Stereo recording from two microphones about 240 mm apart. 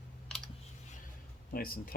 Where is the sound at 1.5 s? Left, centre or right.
Left.